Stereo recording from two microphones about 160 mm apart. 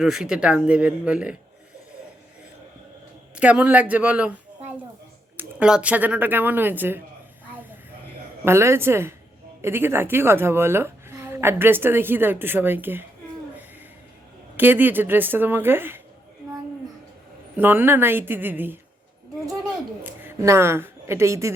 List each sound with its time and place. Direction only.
0.0 s a woman's voice: 5° right (ahead or behind)
3.3 s a woman's voice: 10° right (ahead or behind)
8.4 s a woman's voice: 15° right (ahead or behind)
14.5 s a woman's voice: 10° right (ahead or behind)
17.6 s a woman's voice: 15° right (ahead or behind)
20.2 s a woman's voice: 15° right (ahead or behind)